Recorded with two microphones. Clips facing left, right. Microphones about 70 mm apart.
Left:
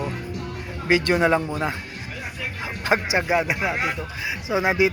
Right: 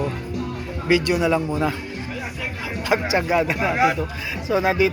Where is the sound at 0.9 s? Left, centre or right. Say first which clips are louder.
Even; left.